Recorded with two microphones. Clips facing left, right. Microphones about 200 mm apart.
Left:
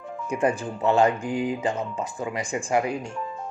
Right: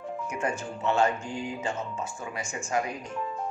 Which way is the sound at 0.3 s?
35° left (ahead or behind).